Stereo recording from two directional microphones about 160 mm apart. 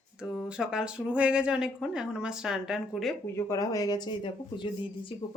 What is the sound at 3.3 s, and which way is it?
Speech, 15° left (ahead or behind).